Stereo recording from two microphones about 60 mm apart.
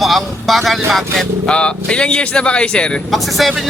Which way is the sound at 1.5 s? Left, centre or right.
Centre.